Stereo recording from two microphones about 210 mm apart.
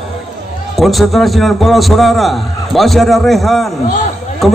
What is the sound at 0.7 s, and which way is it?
A man's voice, centre (ahead or behind).